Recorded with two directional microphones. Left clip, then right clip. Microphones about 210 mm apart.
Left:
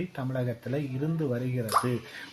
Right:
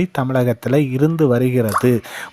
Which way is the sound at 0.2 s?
50° right (ahead or behind).